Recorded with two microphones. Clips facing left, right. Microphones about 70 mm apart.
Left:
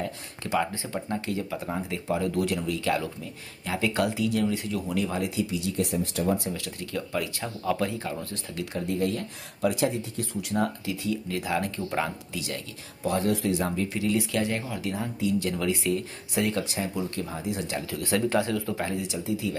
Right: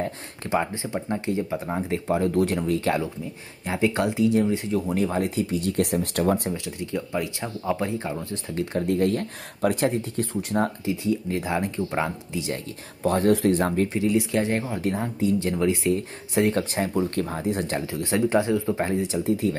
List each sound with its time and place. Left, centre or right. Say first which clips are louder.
0.0 s a sound: right 3 dB; right
0.8 s speech: right 4 dB; centre; by 6.5 s right
6.5 s speech: right 4 dB; right
8.7 s speech: right 5 dB; right
13.0 s speech: right 6 dB; right
13.9 s speech: right 4 dB; right
17.7 s speech: right 3 dB; right
19.2 s speech: right 6 dB; right